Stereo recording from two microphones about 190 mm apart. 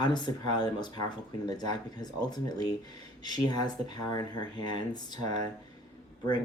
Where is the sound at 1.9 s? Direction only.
20° left (ahead or behind).